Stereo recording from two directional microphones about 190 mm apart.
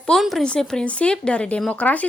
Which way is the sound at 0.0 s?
Centre (ahead or behind).